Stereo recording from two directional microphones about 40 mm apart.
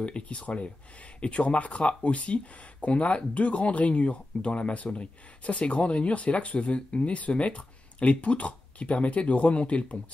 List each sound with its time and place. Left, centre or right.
0.0 s speech: left